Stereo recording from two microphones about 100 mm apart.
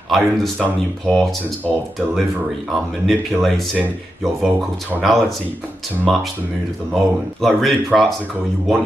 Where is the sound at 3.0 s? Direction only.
Centre (ahead or behind).